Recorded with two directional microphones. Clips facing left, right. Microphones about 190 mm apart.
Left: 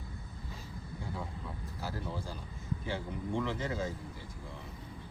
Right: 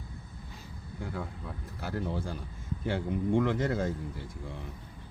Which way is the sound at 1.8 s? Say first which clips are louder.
Right 6 dB; 60° right (ahead or behind).